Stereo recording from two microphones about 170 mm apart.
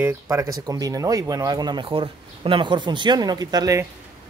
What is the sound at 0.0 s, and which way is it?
Speech, 15° right (ahead or behind).